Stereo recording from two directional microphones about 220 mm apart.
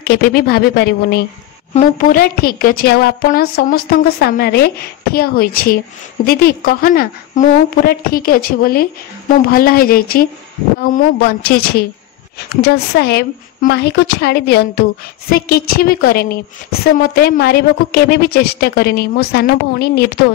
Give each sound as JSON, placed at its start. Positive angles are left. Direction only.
{"t": 0.1, "sound": "a woman's voice", "side_deg": 45}
{"t": 1.7, "sound": "a woman's voice", "side_deg": 35}